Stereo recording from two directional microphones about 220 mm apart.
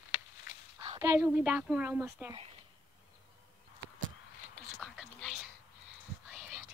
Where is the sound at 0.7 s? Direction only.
20° right (ahead or behind).